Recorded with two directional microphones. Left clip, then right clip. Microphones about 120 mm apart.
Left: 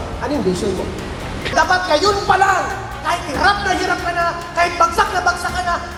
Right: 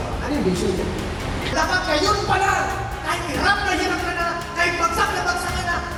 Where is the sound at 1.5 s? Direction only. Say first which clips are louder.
Left 6 dB; 15° left (ahead or behind).